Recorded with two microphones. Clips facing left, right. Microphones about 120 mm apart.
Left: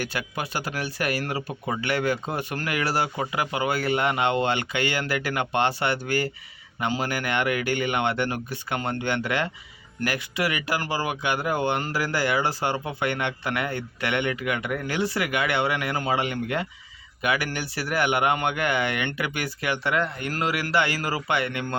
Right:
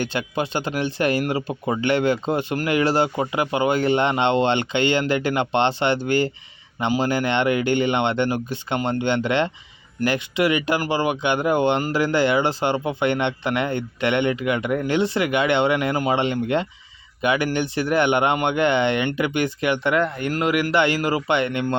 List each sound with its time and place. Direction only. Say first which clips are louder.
0.0 s speech: right 6 dB; 25° right (ahead or behind)